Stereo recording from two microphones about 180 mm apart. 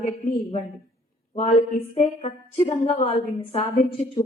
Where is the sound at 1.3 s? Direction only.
35° left (ahead or behind).